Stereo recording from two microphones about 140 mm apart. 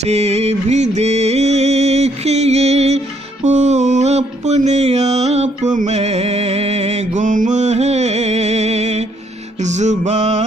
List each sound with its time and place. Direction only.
0.0 s music: 50° right (ahead or behind)
9.6 s mantra: 55° right (ahead or behind)